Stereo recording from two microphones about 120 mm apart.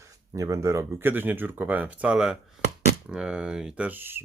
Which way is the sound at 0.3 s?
25° right (ahead or behind).